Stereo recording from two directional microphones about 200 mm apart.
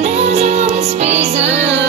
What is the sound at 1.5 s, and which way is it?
Music, 65° right (ahead or behind).